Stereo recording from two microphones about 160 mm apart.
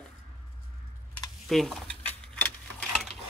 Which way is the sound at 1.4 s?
Centre (ahead or behind).